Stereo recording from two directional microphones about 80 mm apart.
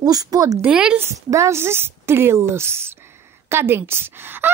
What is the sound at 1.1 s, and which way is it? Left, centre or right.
Speech, right.